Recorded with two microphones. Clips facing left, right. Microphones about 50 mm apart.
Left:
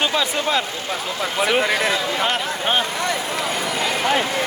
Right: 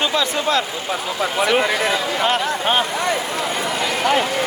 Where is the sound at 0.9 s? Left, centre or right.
Centre.